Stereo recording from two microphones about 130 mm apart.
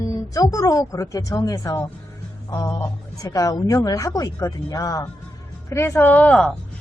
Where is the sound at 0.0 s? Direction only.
30° left (ahead or behind).